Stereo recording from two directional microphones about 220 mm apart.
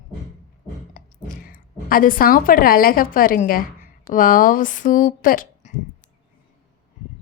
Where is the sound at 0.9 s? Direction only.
40° left (ahead or behind).